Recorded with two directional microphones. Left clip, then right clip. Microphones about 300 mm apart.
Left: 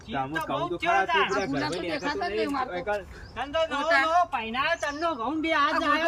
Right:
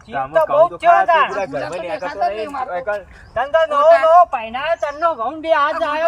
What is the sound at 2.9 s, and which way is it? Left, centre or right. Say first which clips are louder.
Speech: right 10 dB; centre.